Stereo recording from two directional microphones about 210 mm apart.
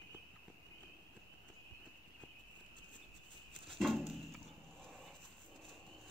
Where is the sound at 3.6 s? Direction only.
Centre (ahead or behind).